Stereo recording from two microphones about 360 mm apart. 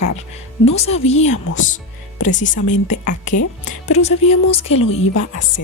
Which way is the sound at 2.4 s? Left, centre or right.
Left.